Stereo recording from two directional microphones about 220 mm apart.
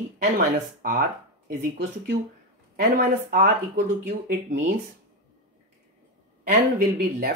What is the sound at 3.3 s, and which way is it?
Speech, 35° right (ahead or behind).